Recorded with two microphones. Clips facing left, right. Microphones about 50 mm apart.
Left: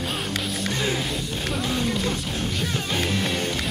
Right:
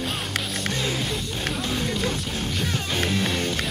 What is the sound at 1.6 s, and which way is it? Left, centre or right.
Speech, centre.